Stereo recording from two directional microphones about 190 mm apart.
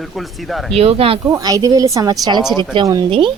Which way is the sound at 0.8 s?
30° right (ahead or behind).